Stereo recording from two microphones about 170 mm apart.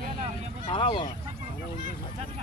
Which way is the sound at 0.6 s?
30° left (ahead or behind).